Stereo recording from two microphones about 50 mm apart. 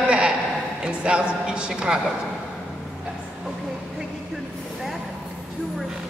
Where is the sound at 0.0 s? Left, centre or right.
Right.